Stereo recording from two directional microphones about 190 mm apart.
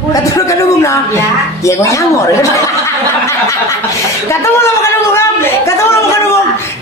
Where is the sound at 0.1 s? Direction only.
15° left (ahead or behind).